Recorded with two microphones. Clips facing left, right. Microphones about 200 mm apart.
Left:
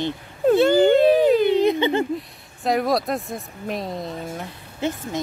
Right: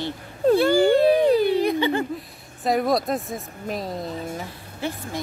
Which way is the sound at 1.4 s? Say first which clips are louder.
Left 2 dB; 20° left (ahead or behind).